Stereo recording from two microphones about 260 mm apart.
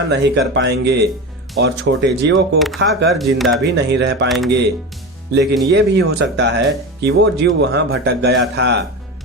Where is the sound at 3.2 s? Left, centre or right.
Centre.